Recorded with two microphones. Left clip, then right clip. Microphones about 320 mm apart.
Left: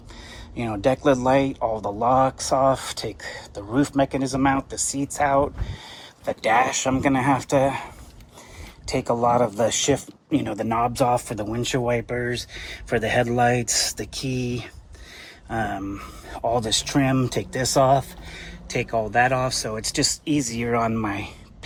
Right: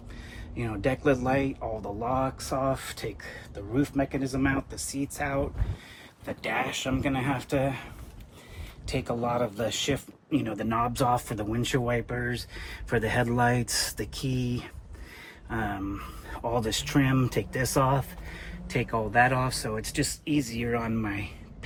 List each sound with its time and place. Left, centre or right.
0.5 s speech: centre
8.9 s speech: centre
15.4 s speech: centre